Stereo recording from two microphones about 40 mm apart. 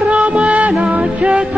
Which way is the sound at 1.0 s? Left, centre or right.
Right.